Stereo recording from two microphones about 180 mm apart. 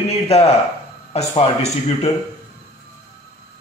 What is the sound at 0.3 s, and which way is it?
A man's voice, 35° left (ahead or behind).